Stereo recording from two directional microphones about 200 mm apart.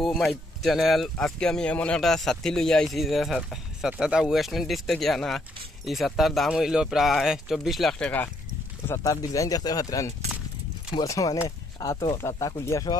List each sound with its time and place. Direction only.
0.0 s speech: centre (ahead or behind); by 12.9 s 15° left (ahead or behind)